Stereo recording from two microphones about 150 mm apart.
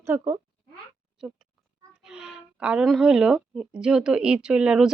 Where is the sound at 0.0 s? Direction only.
15° right (ahead or behind).